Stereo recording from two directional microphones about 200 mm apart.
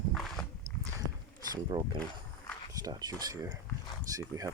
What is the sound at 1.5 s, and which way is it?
Wild animals, 20° right (ahead or behind).